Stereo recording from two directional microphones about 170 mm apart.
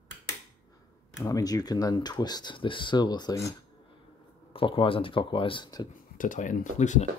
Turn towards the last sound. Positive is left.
turn(degrees=45)  # may be behind; listen again after turning